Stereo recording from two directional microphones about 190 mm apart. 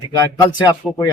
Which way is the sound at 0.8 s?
Centre (ahead or behind).